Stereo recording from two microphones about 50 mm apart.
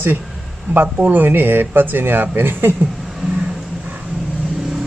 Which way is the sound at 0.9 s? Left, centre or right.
Right.